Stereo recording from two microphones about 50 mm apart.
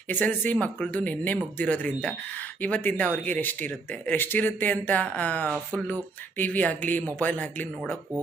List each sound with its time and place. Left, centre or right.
0.1 s speech: left